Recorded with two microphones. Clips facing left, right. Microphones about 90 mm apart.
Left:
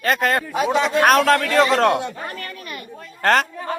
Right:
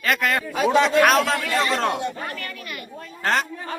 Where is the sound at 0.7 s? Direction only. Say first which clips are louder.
Right 2 dB; 15° left (ahead or behind).